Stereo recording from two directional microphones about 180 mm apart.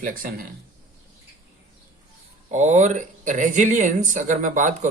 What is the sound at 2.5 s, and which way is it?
Speech, 40° right (ahead or behind).